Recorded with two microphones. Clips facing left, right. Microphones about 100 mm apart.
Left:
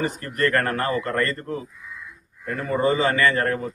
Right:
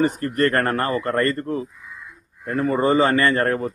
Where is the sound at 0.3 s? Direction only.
40° right (ahead or behind).